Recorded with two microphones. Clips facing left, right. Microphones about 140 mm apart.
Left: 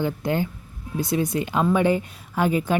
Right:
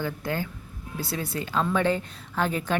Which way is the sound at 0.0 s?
20° left (ahead or behind).